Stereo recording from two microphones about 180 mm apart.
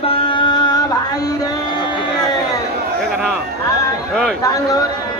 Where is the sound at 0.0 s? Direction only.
30° left (ahead or behind).